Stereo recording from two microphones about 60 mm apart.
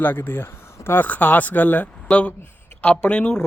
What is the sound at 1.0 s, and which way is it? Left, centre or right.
Speech, left.